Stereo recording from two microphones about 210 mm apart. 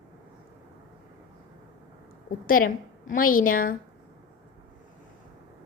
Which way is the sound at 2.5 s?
40° left (ahead or behind).